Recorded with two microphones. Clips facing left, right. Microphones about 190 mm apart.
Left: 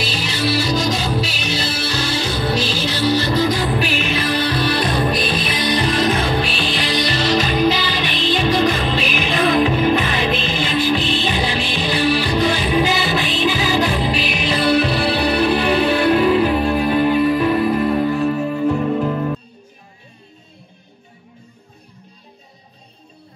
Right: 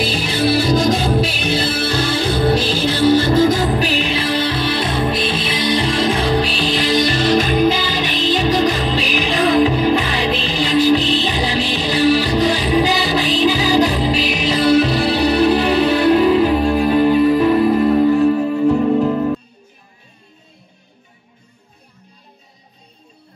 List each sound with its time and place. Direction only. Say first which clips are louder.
0.0 s music: right 4 dB; 55° right (ahead or behind); by 19.3 s 30° right (ahead or behind)